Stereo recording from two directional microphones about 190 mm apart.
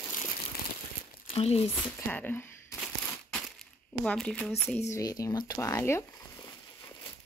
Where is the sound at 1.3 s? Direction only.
30° left (ahead or behind).